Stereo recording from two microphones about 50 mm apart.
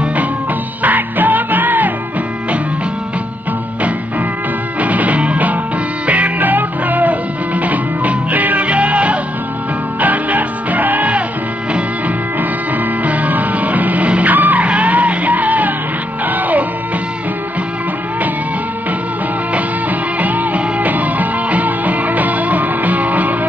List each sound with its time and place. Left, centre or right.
0.8 s music: right
4.7 s music: right
13.0 s music: right
20.2 s music: right